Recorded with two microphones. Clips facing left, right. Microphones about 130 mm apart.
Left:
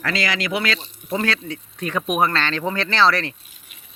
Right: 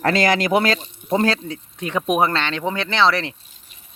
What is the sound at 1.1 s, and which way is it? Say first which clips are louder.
Speech: right 4 dB; 30° right (ahead or behind).